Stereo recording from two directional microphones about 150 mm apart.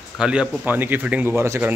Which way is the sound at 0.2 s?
5° right (ahead or behind).